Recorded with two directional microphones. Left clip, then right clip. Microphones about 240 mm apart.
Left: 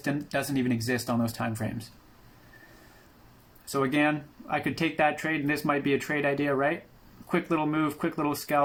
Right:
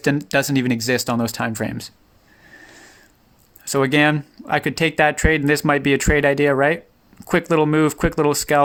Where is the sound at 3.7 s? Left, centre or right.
Right.